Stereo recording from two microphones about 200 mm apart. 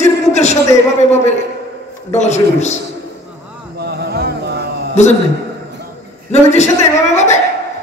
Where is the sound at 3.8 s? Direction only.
55° right (ahead or behind).